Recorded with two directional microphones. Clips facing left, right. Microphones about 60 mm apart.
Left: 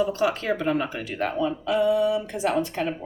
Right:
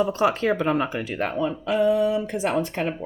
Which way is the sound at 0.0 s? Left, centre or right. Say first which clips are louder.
Right 2 dB; right.